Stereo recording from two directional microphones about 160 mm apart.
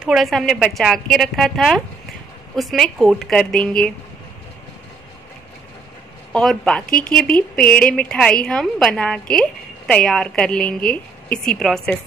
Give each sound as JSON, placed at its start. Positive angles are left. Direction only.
{"t": 0.0, "sound": "speech", "side_deg": 0}
{"t": 6.3, "sound": "speech", "side_deg": 5}